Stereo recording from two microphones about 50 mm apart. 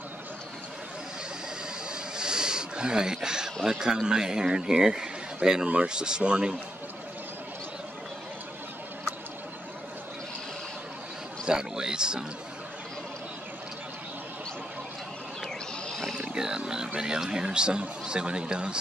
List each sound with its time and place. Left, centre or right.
1.9 s a sound: centre
3.6 s speech: centre
11.4 s speech: centre
15.9 s wild animals: centre
16.2 s speech: centre